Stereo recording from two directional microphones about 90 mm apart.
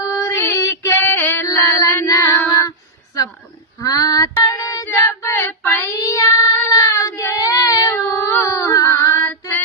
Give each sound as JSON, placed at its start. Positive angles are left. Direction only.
{"t": 0.0, "sound": "music", "side_deg": 40}
{"t": 0.4, "sound": "female singing", "side_deg": 35}
{"t": 1.5, "sound": "female singing", "side_deg": 35}
{"t": 2.0, "sound": "child singing", "side_deg": 30}
{"t": 3.8, "sound": "female singing", "side_deg": 45}
{"t": 4.9, "sound": "child singing", "side_deg": 35}
{"t": 5.8, "sound": "child singing", "side_deg": 40}